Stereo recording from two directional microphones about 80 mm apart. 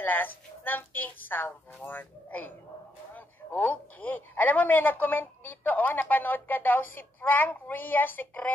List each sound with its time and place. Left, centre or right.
0.0 s a woman's voice: left